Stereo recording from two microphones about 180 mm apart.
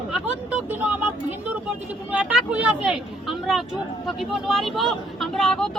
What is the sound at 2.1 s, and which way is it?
A woman's voice, 5° right (ahead or behind).